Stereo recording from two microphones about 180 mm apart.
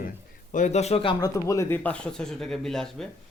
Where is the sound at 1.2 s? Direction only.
15° left (ahead or behind).